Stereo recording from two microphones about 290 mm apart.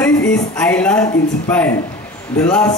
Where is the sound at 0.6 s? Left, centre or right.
Centre.